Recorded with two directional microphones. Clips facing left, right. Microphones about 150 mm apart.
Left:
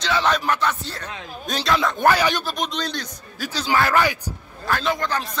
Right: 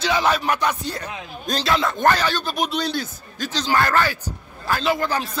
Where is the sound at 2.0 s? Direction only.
10° left (ahead or behind).